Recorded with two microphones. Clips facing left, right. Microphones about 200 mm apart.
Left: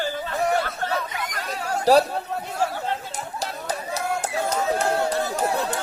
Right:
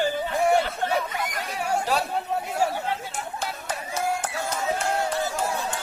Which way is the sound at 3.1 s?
35° left (ahead or behind).